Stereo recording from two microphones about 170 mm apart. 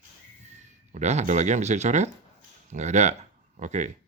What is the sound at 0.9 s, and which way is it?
Speech, 45° right (ahead or behind).